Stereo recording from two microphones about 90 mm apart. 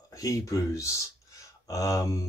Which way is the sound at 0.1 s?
40° left (ahead or behind).